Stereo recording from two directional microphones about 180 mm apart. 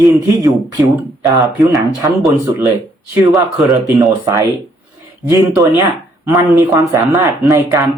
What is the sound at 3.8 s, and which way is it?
Speech, 20° right (ahead or behind).